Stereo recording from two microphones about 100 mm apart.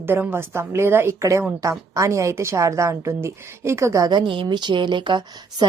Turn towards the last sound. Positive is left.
turn(degrees=-45)  # may be behind; listen again after turning